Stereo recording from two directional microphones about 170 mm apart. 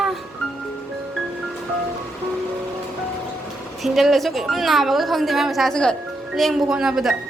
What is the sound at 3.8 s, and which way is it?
A woman's voice, centre (ahead or behind).